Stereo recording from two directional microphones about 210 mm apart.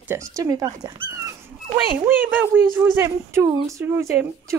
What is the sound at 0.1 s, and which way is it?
A woman's voice, 15° right (ahead or behind).